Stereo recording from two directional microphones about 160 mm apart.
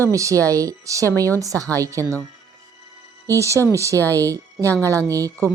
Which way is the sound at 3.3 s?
20° right (ahead or behind).